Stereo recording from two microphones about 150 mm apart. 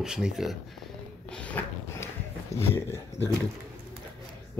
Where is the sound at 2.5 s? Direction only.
15° left (ahead or behind).